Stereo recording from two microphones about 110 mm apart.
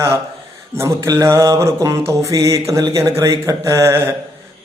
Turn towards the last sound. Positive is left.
turn(degrees=-25)  # may be behind; listen again after turning